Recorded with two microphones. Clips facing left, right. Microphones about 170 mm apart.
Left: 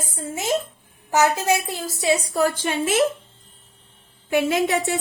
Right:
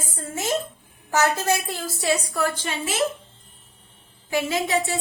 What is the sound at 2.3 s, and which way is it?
Speech, 50° left (ahead or behind).